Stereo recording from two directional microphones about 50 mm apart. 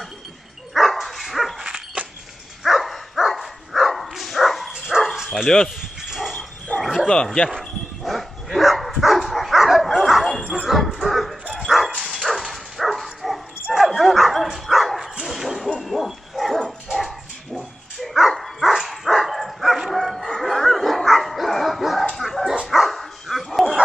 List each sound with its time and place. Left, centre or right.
0.7 s dog: centre
1.6 s dog: centre
2.6 s dog: centre
5.3 s speech: centre
5.8 s dog: centre
6.7 s bow-wow: left
7.5 s dog: centre
10.5 s bow-wow: centre
16.9 s dog: centre